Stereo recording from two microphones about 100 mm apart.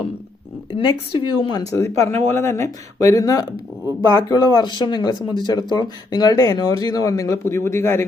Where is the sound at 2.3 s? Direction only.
25° left (ahead or behind).